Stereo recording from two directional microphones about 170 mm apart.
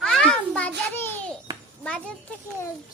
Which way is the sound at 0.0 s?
5° left (ahead or behind).